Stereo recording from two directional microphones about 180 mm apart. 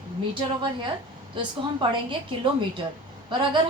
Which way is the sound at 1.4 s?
25° right (ahead or behind).